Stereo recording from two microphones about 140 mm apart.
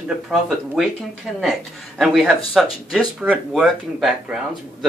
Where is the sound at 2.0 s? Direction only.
Centre (ahead or behind).